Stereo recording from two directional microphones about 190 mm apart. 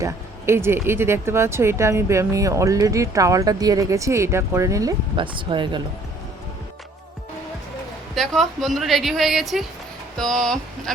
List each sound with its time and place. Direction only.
0.0 s speech: 15° right (ahead or behind)
8.1 s a woman's voice: centre (ahead or behind)